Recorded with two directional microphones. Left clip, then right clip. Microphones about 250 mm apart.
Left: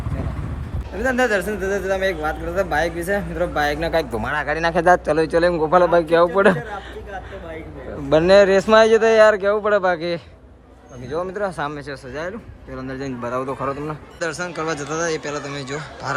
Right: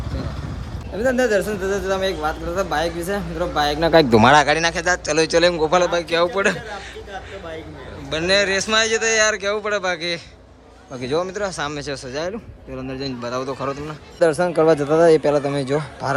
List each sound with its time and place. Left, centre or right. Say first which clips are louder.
0.9 s speech: right 1 dB; centre
1.5 s speech: even; centre
3.8 s speech: right 9 dB; right
4.4 s a man's voice: left 2 dB; centre
8.1 s a man's voice: left 6 dB; centre
11.0 s a man's voice: right 2 dB; centre